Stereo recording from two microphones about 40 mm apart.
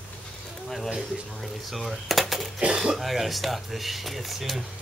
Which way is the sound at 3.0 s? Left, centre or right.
Centre.